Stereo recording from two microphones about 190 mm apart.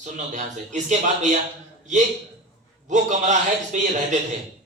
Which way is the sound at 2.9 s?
40° right (ahead or behind).